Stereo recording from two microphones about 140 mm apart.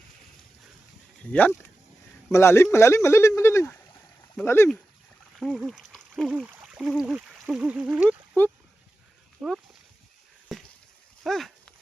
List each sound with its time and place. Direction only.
1.3 s speech: 10° left (ahead or behind)
5.4 s speech: centre (ahead or behind)
8.4 s speech: 15° left (ahead or behind)
9.4 s speech: 5° right (ahead or behind)
10.5 s a sound: centre (ahead or behind)